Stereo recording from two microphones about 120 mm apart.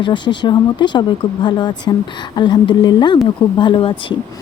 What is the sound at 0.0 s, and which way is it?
Speech, 40° left (ahead or behind).